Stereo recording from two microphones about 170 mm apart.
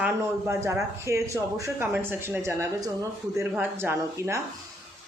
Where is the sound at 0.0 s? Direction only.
15° right (ahead or behind).